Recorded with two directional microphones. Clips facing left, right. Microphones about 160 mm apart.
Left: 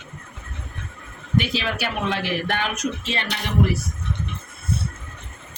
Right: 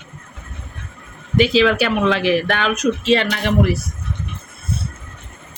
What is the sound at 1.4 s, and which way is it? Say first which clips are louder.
A woman's voice: right 13 dB; 90° right.